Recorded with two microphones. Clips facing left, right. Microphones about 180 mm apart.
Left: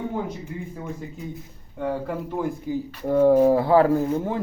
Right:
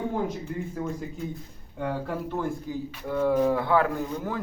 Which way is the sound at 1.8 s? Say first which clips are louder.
Left 3 dB; centre (ahead or behind).